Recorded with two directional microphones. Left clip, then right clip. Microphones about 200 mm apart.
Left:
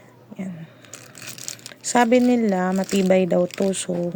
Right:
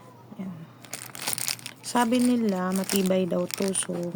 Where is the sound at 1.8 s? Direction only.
20° left (ahead or behind).